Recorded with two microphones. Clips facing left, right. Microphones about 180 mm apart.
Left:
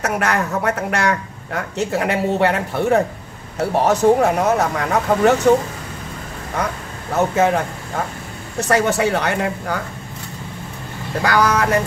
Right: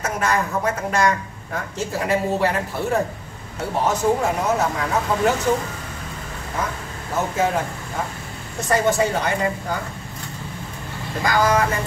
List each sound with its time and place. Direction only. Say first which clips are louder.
0.0 s a woman's voice: left 2 dB; 70° left (ahead or behind)
7.2 s a woman's voice: left 5 dB; 65° left (ahead or behind)
11.2 s a woman's voice: left 2 dB; 70° left (ahead or behind)